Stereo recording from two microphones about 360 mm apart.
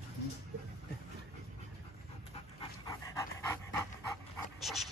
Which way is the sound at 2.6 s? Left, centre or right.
Centre.